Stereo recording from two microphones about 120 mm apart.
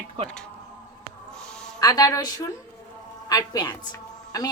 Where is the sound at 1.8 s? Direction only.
30° left (ahead or behind).